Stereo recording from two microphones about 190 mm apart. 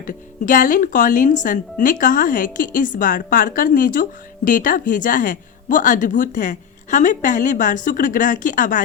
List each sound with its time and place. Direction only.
0.0 s a woman's voice: 45° left (ahead or behind)